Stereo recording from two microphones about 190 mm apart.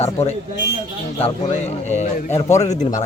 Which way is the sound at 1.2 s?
35° left (ahead or behind).